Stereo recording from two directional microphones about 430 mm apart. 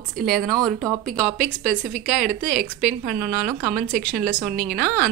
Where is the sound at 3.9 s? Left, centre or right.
Centre.